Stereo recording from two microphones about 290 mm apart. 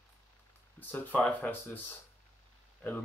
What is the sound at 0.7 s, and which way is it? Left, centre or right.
Speech, centre.